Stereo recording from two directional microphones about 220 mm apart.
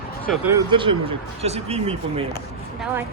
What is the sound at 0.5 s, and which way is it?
Speech, 20° right (ahead or behind).